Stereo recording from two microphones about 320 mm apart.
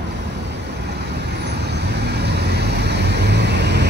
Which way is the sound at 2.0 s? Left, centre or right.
Right.